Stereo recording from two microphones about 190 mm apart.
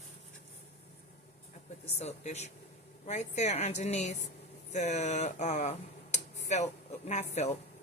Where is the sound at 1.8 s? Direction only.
35° left (ahead or behind).